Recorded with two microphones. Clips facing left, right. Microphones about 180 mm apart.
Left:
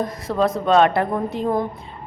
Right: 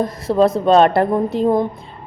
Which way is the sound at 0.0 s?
30° right (ahead or behind).